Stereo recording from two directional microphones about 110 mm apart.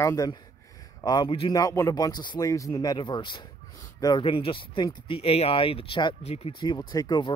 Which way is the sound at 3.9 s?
35° left (ahead or behind).